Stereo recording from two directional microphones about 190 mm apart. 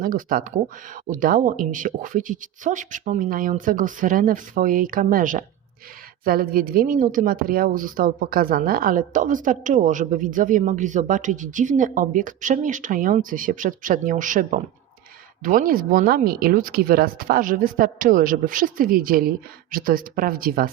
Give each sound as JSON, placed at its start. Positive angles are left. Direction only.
{"t": 0.0, "sound": "a woman's voice", "side_deg": -45}